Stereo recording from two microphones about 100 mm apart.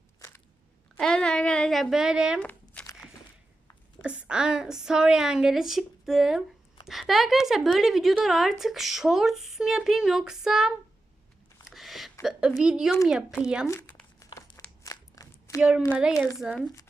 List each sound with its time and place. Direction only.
0.2 s crunch: 30° left (ahead or behind)
0.9 s a woman's voice: 5° left (ahead or behind)
2.4 s a sound: 10° left (ahead or behind)
4.0 s a woman's voice: 10° right (ahead or behind)
11.6 s a sound: centre (ahead or behind)
12.2 s a woman's voice: 5° right (ahead or behind)
13.7 s crumpling: 15° left (ahead or behind)
14.8 s a sound: 30° left (ahead or behind)
16.4 s a woman's voice: 5° right (ahead or behind)